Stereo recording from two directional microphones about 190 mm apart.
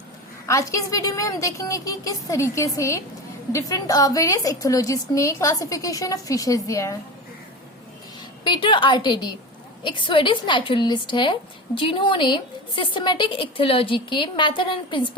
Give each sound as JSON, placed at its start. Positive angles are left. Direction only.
{"t": 0.4, "sound": "a woman's voice", "side_deg": 15}
{"t": 8.4, "sound": "a woman's voice", "side_deg": 25}